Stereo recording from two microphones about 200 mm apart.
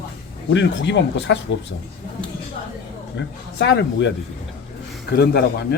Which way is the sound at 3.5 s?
60° left (ahead or behind).